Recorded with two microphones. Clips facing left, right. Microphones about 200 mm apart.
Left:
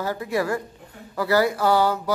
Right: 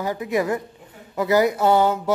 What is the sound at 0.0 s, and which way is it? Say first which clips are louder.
A man's voice: right 2 dB; 15° right (ahead or behind).